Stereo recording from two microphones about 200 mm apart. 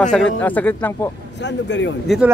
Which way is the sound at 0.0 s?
5° left (ahead or behind).